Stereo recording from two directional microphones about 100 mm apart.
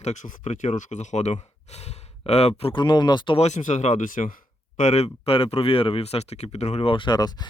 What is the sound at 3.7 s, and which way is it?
Speech, 90° left.